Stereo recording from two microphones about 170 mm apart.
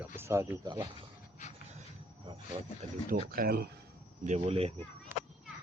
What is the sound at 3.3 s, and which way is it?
Speech, 60° right (ahead or behind).